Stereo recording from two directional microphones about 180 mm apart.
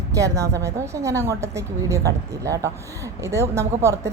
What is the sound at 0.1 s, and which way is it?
A woman's voice, 15° right (ahead or behind).